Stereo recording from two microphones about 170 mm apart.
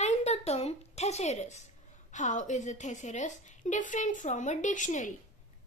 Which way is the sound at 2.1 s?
45° left (ahead or behind).